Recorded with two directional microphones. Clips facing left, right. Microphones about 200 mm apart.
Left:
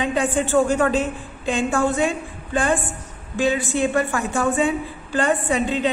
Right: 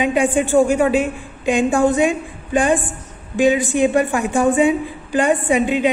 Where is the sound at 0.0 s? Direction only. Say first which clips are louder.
Right 4 dB; 15° right (ahead or behind).